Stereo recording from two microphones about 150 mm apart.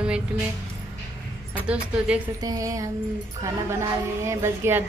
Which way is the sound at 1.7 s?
10° right (ahead or behind).